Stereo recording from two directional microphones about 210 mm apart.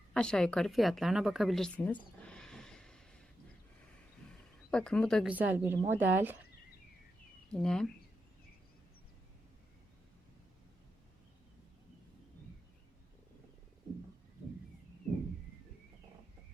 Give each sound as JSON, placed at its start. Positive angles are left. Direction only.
{"t": 0.1, "sound": "a woman's voice", "side_deg": 5}
{"t": 2.2, "sound": "a sound", "side_deg": 5}
{"t": 4.7, "sound": "a woman's voice", "side_deg": 5}
{"t": 5.3, "sound": "a woman's voice", "side_deg": -10}
{"t": 7.5, "sound": "a woman's voice", "side_deg": 5}